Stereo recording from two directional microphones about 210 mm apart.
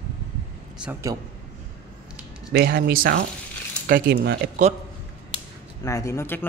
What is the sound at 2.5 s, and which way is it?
Speech, 50° right (ahead or behind).